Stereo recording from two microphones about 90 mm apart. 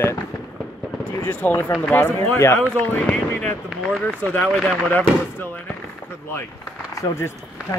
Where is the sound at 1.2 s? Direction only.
25° left (ahead or behind); by 4.8 s 10° left (ahead or behind).